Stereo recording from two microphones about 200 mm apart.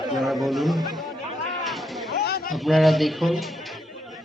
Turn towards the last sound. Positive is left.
turn(degrees=0)  # may be behind; listen again after turning